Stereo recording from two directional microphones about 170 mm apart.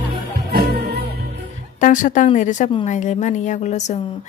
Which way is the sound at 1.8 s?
50° left (ahead or behind).